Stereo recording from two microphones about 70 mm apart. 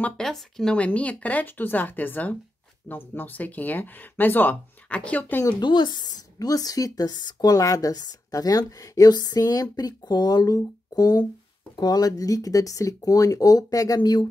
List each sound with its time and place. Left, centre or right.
0.2 s speech: centre
0.7 s speech: centre
5.6 s speech: left
12.2 s speech: left